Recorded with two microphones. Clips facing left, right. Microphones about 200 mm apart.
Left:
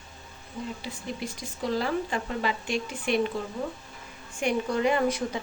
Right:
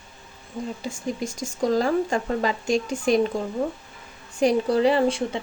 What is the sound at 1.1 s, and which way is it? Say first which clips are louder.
A woman's voice: right 7 dB; 45° right (ahead or behind).